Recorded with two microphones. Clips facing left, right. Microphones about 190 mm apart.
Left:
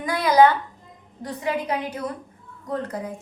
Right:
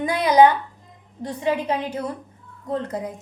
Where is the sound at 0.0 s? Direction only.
20° right (ahead or behind).